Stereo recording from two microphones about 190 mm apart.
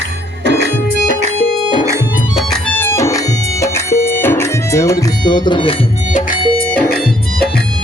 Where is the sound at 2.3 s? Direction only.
5° left (ahead or behind); by 5.7 s 25° left (ahead or behind).